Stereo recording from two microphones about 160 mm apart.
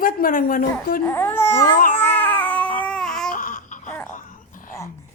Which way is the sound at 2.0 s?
10° left (ahead or behind).